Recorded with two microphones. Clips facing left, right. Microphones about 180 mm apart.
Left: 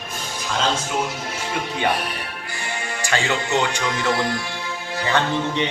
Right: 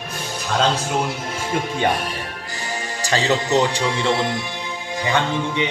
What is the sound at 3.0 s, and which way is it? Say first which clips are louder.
Speech: right 4 dB; 35° right (ahead or behind).